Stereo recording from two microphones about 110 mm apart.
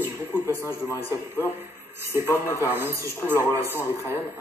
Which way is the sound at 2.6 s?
20° right (ahead or behind).